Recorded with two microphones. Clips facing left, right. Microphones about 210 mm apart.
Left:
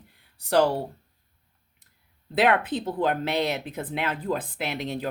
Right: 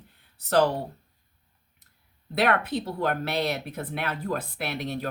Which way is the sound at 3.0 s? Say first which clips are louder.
Left 3 dB; 15° left (ahead or behind).